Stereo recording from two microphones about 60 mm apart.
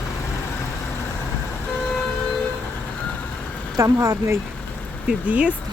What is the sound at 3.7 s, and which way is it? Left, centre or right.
Speech, right.